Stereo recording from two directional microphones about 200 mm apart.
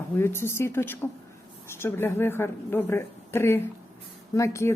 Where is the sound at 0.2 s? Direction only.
10° left (ahead or behind).